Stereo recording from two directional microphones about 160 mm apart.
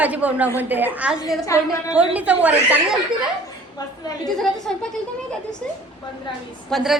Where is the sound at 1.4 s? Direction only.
20° left (ahead or behind).